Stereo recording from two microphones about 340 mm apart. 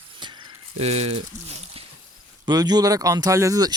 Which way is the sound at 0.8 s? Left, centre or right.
Centre.